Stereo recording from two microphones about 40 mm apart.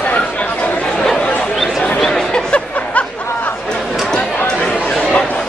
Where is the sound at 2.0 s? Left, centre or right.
Centre.